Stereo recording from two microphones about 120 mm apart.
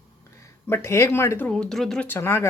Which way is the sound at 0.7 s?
25° left (ahead or behind).